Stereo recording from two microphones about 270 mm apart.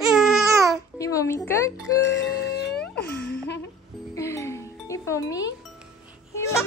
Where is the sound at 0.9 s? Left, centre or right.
Centre.